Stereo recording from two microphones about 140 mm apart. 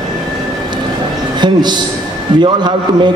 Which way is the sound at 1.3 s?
30° right (ahead or behind).